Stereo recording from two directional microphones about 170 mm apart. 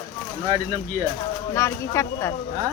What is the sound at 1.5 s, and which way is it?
Speech, 15° left (ahead or behind).